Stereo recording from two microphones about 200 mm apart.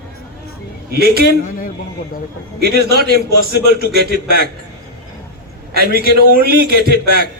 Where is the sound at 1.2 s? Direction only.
45° left (ahead or behind).